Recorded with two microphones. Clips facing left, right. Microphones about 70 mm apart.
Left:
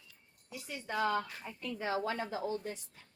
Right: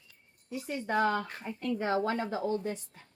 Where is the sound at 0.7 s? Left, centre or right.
Right.